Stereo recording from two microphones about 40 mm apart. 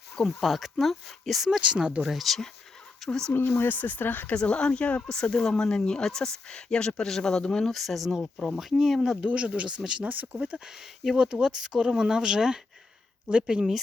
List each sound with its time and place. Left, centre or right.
0.3 s speech: centre
1.6 s speech: right
2.0 s speech: centre
3.1 s speech: centre
3.3 s speech: left
4.4 s speech: left
5.0 s speech: centre
7.6 s speech: centre
9.2 s speech: right
10.0 s speech: right
10.7 s speech: centre
11.2 s speech: right